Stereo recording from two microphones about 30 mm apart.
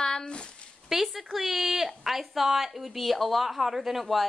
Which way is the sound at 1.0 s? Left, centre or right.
Centre.